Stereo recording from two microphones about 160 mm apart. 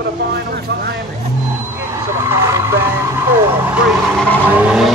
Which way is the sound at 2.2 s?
15° right (ahead or behind).